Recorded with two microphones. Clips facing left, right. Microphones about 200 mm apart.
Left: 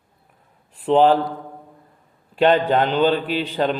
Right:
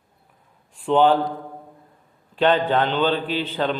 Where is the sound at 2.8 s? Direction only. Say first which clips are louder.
Left 3 dB; 40° left (ahead or behind).